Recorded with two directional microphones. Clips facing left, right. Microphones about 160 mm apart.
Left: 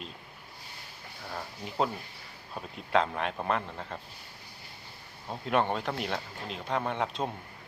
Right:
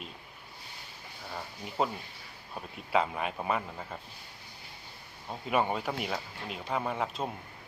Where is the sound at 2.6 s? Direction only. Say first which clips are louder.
Left 2 dB; 5° right (ahead or behind).